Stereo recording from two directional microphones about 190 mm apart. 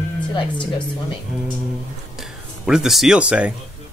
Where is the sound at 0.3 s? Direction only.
25° left (ahead or behind).